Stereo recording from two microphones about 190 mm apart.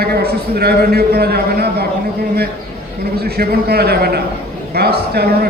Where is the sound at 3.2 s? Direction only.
55° right (ahead or behind).